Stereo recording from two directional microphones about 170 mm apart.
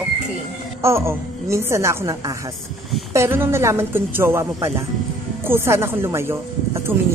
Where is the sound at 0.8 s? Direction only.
15° right (ahead or behind).